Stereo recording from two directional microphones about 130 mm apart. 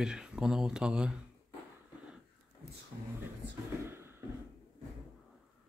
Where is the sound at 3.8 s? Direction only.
20° right (ahead or behind).